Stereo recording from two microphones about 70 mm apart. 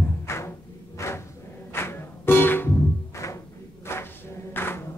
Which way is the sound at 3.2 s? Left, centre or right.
Left.